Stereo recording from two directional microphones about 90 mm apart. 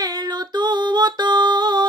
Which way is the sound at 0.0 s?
45° right (ahead or behind).